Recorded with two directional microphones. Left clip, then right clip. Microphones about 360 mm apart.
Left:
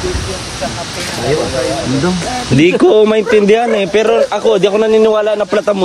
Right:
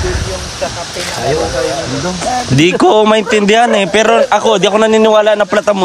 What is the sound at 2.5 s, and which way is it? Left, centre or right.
A man's voice, centre.